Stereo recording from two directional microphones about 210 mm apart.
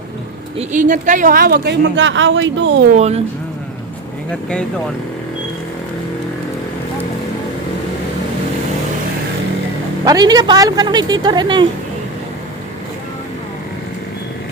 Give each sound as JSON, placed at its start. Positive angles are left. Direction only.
{"t": 0.5, "sound": "speech", "side_deg": -35}
{"t": 2.9, "sound": "speech", "side_deg": -30}
{"t": 4.3, "sound": "speech", "side_deg": 5}
{"t": 10.0, "sound": "a woman's voice", "side_deg": -20}